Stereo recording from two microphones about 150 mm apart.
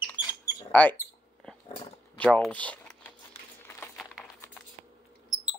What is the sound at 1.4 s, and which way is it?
Dog, 5° left (ahead or behind).